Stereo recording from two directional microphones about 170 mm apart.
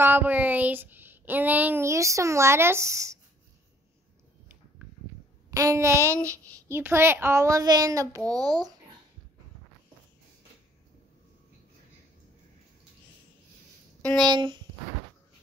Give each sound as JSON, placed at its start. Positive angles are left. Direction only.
{"t": 0.0, "sound": "child singing", "side_deg": -10}
{"t": 5.5, "sound": "child singing", "side_deg": -20}
{"t": 8.3, "sound": "speech", "side_deg": -20}
{"t": 14.0, "sound": "speech", "side_deg": 5}
{"t": 14.3, "sound": "speech", "side_deg": -25}